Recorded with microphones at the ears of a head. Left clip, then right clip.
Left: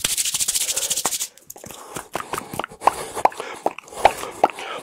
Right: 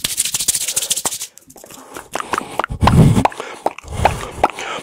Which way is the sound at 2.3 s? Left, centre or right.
Right.